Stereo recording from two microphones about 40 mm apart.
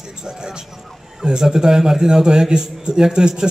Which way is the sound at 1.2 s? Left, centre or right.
Centre.